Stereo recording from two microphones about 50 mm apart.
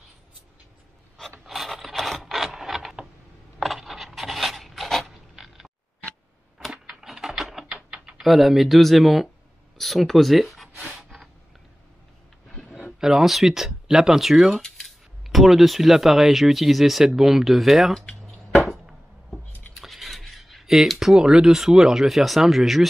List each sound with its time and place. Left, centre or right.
1.4 s a sound: centre
6.7 s a sound: centre
7.1 s typing: centre
7.6 s typing: centre
8.2 s speech: centre
11.0 s snort: centre
13.0 s speech: centre
19.7 s a sound: centre
21.2 s speech: centre